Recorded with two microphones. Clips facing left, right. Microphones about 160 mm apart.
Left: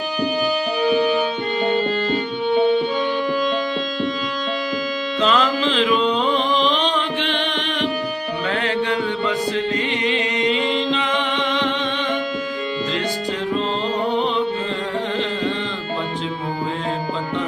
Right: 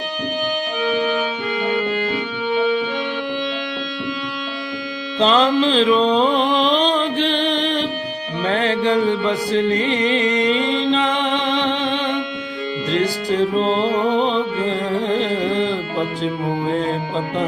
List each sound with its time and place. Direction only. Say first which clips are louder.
5.2 s music: right 4 dB; 30° right (ahead or behind)
13.3 s music: right 8 dB; 35° right (ahead or behind)
15.1 s carnatic music: right 4 dB; 35° right (ahead or behind)